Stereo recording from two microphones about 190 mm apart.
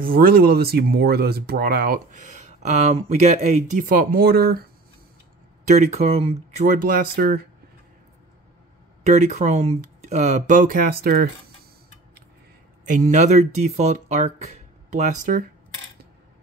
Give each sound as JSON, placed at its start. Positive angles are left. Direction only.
{"t": 0.0, "sound": "speech", "side_deg": -50}
{"t": 5.7, "sound": "speech", "side_deg": -35}
{"t": 9.0, "sound": "speech", "side_deg": -35}
{"t": 12.8, "sound": "speech", "side_deg": -40}